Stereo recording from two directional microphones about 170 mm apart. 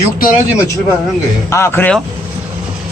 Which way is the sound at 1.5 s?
15° left (ahead or behind).